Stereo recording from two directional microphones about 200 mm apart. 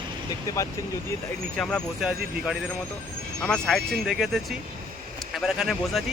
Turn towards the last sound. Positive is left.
turn(degrees=0)  # may be behind; listen again after turning